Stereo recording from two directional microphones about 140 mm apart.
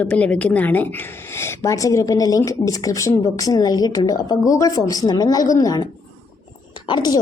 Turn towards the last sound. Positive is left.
turn(degrees=30)  # may be behind; listen again after turning